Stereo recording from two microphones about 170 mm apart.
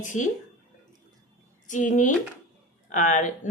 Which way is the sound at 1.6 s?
45° left (ahead or behind).